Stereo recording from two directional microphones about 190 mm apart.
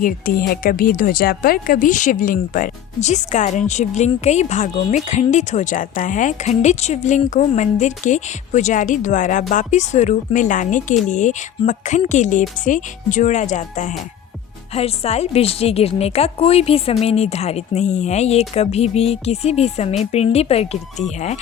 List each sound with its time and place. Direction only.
0.0 s speech: 50° left (ahead or behind); by 20.7 s 30° left (ahead or behind)